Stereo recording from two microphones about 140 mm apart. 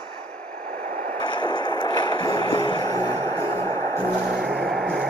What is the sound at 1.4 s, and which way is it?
Music, 35° left (ahead or behind).